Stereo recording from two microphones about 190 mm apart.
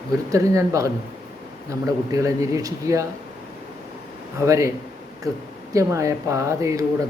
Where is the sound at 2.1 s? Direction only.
15° right (ahead or behind).